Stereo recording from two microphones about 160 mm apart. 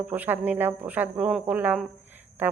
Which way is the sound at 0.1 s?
10° right (ahead or behind).